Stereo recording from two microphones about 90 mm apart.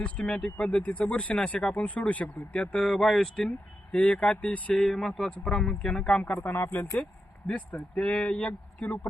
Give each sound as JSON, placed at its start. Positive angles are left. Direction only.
{"t": 0.0, "sound": "speech", "side_deg": 10}
{"t": 4.9, "sound": "speech", "side_deg": 5}
{"t": 6.4, "sound": "speech", "side_deg": 25}